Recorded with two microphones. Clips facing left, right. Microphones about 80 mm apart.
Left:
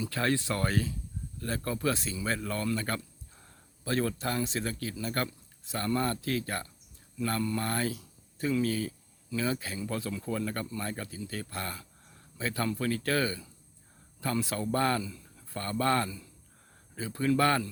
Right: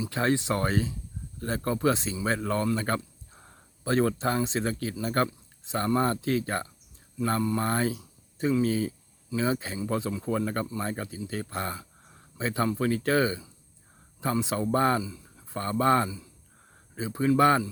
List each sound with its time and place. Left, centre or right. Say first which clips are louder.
0.0 s speech: right 3 dB; right